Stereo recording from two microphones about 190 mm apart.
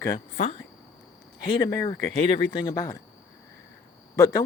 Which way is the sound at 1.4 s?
25° left (ahead or behind).